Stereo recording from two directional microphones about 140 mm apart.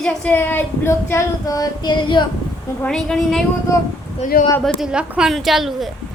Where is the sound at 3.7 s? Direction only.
20° left (ahead or behind).